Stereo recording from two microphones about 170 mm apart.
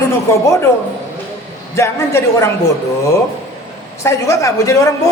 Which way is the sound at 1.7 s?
15° left (ahead or behind).